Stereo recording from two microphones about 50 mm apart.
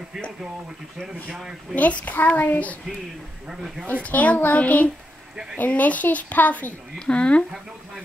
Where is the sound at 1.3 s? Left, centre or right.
Centre.